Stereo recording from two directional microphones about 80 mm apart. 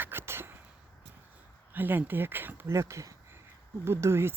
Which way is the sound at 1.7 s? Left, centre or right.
Right.